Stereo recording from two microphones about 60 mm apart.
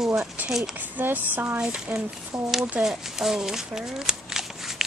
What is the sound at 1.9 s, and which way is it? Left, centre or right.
Speech, centre.